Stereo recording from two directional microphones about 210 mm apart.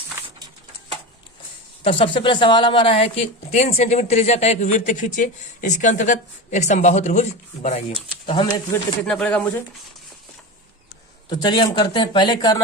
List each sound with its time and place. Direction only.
1.8 s a woman's voice: 25° left (ahead or behind)
9.0 s speech: 5° left (ahead or behind)
11.3 s speech: 20° left (ahead or behind)